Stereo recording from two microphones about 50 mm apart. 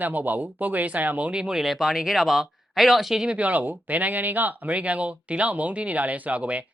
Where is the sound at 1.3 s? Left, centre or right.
Centre.